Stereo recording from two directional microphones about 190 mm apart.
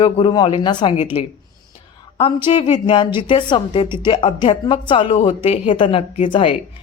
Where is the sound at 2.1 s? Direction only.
25° left (ahead or behind).